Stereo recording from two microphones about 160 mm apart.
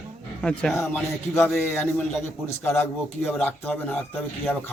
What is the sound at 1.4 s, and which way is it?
A man's voice, 5° left (ahead or behind).